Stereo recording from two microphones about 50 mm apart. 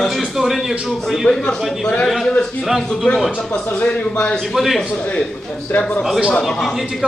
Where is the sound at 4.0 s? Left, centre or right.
Left.